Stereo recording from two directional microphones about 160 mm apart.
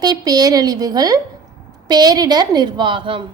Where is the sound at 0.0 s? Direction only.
25° right (ahead or behind).